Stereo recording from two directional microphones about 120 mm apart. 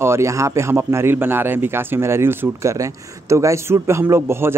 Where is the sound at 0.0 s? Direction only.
25° right (ahead or behind).